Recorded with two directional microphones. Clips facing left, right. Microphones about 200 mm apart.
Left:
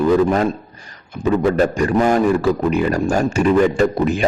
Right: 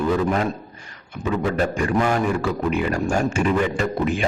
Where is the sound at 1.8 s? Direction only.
40° left (ahead or behind).